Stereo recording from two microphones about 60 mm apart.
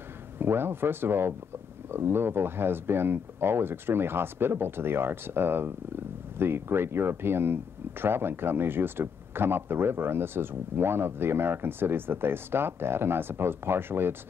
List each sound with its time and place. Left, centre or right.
0.4 s speech: right